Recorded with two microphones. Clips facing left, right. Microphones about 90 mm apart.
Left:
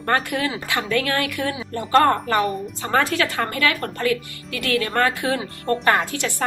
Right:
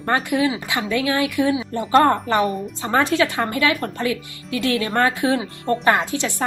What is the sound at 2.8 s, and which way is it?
A woman's voice, 20° right (ahead or behind).